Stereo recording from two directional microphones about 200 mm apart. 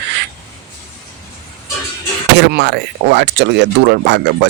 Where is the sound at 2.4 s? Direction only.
60° right (ahead or behind).